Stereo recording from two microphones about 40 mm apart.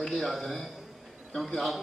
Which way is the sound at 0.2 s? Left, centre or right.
Centre.